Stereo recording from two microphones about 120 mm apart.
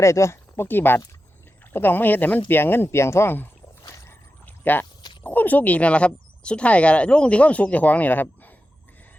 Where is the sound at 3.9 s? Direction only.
25° left (ahead or behind).